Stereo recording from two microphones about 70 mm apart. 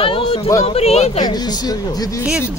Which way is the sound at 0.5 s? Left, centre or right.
Left.